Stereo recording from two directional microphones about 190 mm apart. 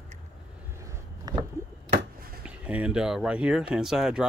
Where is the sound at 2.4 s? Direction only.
5° right (ahead or behind).